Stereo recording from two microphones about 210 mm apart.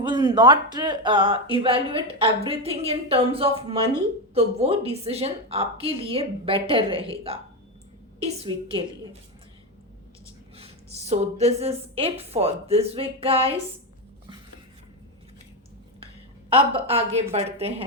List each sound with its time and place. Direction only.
0.0 s speech: 20° right (ahead or behind)
10.6 s speech: 30° right (ahead or behind)
16.6 s speech: 25° right (ahead or behind)